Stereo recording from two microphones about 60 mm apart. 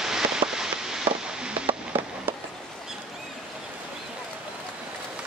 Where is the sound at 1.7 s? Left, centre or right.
Right.